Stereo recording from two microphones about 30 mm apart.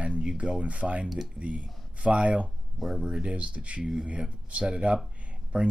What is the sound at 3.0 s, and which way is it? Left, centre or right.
Speech, right.